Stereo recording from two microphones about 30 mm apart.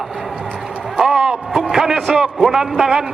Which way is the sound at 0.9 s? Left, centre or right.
Centre.